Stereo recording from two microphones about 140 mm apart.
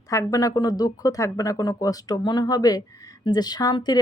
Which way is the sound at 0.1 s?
25° left (ahead or behind).